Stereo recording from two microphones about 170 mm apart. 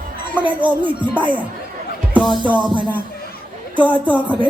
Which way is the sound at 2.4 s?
25° right (ahead or behind).